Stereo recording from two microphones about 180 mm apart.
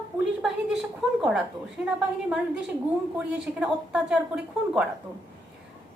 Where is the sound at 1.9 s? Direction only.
5° right (ahead or behind).